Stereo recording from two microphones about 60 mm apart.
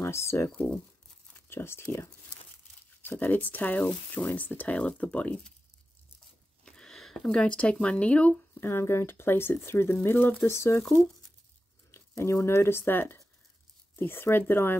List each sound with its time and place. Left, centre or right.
0.0 s speech: left
1.5 s speech: left
3.0 s speech: left
6.6 s a sound: centre
7.2 s speech: centre
8.5 s speech: left
10.8 s speech: centre
11.9 s speech: left